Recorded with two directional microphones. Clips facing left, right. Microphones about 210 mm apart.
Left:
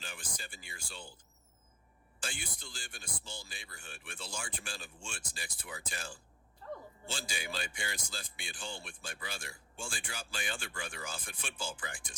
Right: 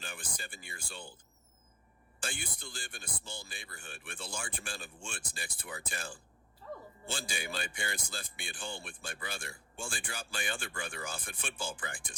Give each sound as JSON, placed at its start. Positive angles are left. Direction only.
{"t": 0.0, "sound": "speech", "side_deg": -55}
{"t": 2.2, "sound": "speech", "side_deg": -55}
{"t": 6.6, "sound": "a man's voice", "side_deg": 0}
{"t": 7.1, "sound": "speech", "side_deg": -55}